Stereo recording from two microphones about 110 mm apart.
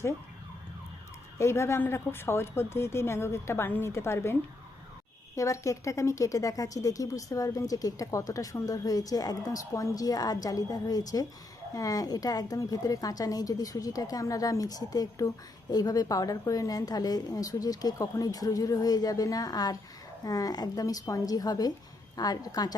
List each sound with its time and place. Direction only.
1.4 s a woman's voice: 25° left (ahead or behind)